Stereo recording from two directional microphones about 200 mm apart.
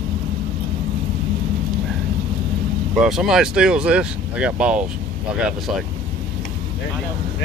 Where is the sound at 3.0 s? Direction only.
Centre (ahead or behind).